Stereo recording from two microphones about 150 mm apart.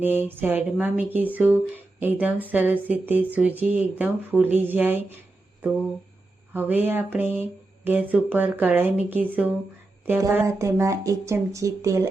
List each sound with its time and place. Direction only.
0.0 s speech: 15° right (ahead or behind)
6.5 s speech: 10° right (ahead or behind)